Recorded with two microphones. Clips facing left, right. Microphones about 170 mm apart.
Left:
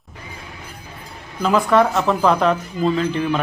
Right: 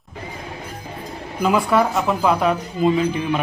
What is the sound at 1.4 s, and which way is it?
Speech, 10° right (ahead or behind).